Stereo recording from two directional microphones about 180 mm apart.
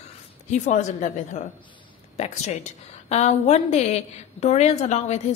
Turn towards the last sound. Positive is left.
turn(degrees=40)  # may be behind; listen again after turning